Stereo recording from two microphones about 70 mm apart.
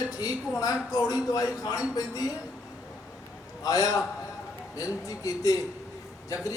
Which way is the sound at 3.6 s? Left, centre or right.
Left.